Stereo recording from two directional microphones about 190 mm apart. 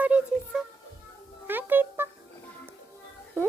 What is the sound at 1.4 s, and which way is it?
Music, 10° right (ahead or behind).